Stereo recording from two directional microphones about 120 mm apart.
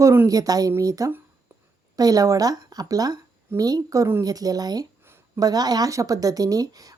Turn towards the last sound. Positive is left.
turn(degrees=-30)  # may be behind; listen again after turning